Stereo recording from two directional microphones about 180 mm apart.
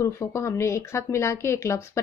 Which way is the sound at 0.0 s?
15° left (ahead or behind).